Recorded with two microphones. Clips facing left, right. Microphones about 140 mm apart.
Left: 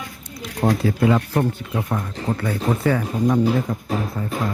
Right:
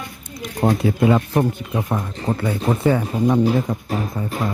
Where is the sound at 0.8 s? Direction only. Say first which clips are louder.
Right 2 dB; 20° right (ahead or behind).